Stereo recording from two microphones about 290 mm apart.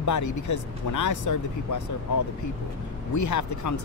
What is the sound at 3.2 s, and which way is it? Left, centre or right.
Speech, left.